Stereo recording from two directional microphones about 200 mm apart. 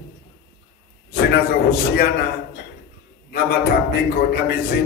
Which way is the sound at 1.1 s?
50° left (ahead or behind).